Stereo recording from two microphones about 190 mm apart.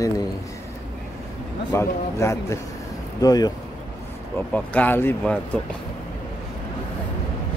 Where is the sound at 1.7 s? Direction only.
15° left (ahead or behind).